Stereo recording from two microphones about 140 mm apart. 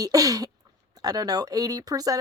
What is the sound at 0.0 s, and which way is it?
Speech, 25° right (ahead or behind).